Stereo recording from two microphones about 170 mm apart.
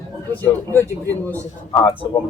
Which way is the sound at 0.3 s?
10° left (ahead or behind).